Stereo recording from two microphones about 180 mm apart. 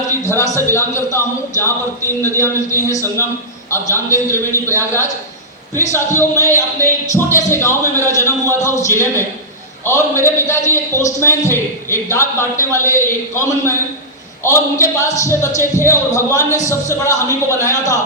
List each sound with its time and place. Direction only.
0.3 s a man's voice: 15° left (ahead or behind)